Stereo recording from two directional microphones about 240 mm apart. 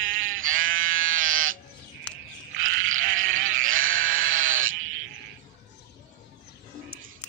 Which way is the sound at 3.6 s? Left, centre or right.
Right.